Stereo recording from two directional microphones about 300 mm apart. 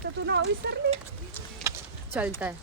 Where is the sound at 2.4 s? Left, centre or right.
Centre.